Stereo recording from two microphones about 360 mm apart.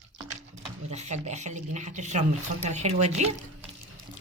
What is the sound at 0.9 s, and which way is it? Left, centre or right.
Speech, centre.